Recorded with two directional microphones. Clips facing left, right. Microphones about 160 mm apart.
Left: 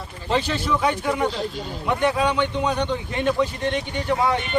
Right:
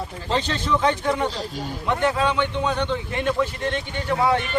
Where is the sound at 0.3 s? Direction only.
10° left (ahead or behind).